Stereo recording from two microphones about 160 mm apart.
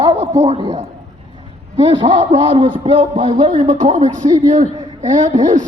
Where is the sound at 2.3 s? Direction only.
35° right (ahead or behind).